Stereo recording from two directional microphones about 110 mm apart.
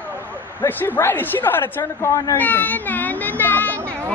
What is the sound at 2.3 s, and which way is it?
A child's voice, 15° left (ahead or behind).